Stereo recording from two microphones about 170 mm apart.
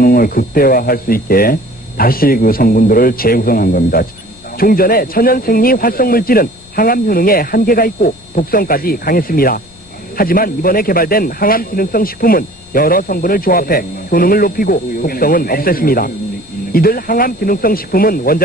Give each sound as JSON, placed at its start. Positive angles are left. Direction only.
{"t": 0.0, "sound": "speech", "side_deg": 60}